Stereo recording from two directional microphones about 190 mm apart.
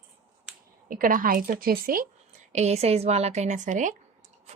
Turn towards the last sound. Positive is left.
turn(degrees=-40)  # may be behind; listen again after turning